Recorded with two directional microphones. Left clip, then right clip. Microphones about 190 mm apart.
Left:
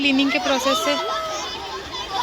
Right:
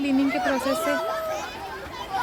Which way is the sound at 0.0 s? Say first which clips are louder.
Left 4 dB; 10° right (ahead or behind).